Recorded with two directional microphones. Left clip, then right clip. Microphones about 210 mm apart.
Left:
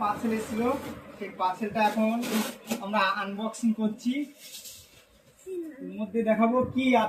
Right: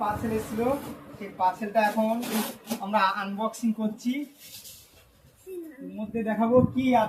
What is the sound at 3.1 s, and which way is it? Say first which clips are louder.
Speech: right 1 dB; 30° right (ahead or behind).